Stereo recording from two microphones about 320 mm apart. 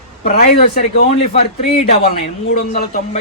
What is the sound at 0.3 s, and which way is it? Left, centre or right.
Speech, left.